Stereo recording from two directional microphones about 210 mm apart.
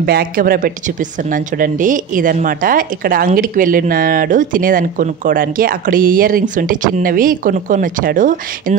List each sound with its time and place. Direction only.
0.0 s a woman's voice: 45° right (ahead or behind)